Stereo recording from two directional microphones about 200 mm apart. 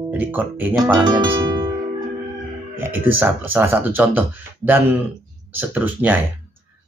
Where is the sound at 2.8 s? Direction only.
10° right (ahead or behind).